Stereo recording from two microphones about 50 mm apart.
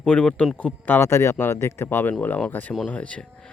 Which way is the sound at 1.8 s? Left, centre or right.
Left.